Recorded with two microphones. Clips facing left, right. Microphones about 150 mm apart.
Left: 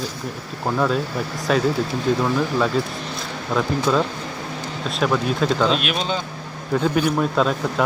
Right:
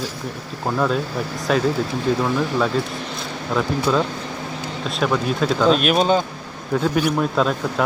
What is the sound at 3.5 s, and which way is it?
A man's voice, centre (ahead or behind).